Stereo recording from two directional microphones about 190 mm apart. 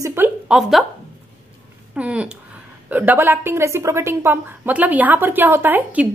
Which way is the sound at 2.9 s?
10° right (ahead or behind).